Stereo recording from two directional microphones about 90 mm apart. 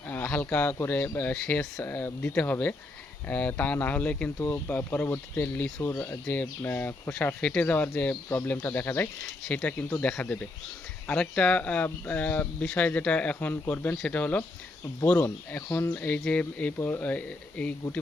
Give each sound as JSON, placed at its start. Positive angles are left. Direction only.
{"t": 0.1, "sound": "speech", "side_deg": 20}
{"t": 4.4, "sound": "speech", "side_deg": 30}
{"t": 16.0, "sound": "speech", "side_deg": 15}